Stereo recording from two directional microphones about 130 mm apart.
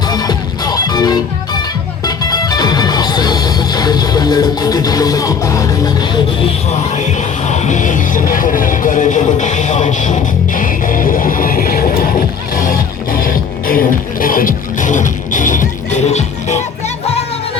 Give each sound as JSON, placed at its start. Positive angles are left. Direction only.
{"t": 0.1, "sound": "music", "side_deg": 30}
{"t": 6.9, "sound": "music", "side_deg": 60}